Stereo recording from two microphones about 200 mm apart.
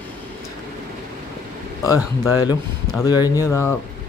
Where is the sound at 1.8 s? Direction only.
15° left (ahead or behind).